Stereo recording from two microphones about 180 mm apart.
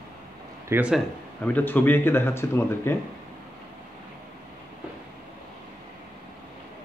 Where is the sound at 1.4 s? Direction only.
10° left (ahead or behind).